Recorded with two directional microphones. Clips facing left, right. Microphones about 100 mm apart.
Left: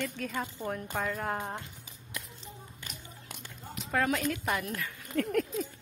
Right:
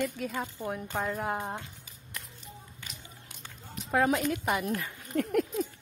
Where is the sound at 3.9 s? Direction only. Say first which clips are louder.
Right 3 dB; 25° right (ahead or behind).